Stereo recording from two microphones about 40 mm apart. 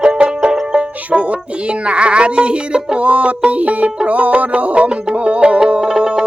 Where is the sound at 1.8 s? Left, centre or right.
Right.